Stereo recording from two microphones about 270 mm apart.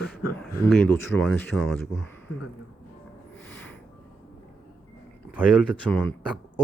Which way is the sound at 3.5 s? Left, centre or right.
Centre.